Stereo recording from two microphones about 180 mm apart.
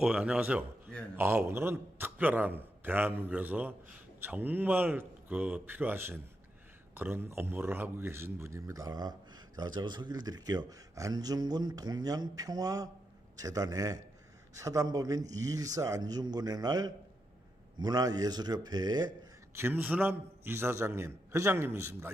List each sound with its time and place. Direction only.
0.0 s a man's voice: 5° right (ahead or behind); by 19.1 s 20° right (ahead or behind)
19.5 s a man's voice: 10° right (ahead or behind)